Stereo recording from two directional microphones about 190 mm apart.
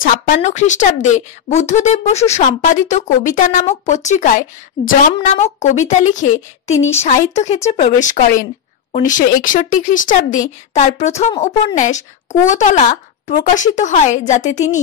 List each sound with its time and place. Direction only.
0.0 s speech: 40° left (ahead or behind)